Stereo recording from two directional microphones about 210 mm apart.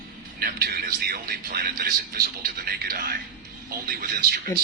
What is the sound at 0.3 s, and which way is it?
A man's voice, 45° right (ahead or behind).